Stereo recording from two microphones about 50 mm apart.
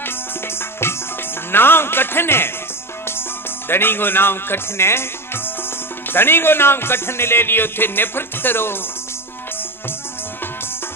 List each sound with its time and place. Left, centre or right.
0.0 s music: left
1.5 s a man's voice: left